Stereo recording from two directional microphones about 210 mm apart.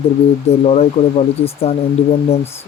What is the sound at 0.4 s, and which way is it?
Speech, 30° left (ahead or behind).